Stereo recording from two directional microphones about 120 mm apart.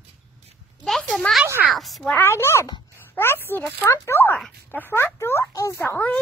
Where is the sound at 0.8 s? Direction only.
Centre (ahead or behind).